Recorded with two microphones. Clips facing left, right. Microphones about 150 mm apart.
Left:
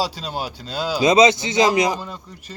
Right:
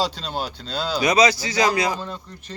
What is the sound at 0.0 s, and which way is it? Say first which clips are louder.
Speech: even; 10° left (ahead or behind).